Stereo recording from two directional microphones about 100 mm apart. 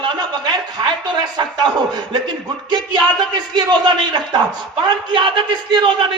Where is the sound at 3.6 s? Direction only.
45° right (ahead or behind).